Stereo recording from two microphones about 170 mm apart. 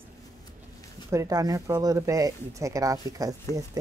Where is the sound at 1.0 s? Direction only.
20° right (ahead or behind).